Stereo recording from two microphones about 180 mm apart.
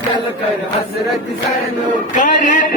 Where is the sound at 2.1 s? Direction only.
45° left (ahead or behind).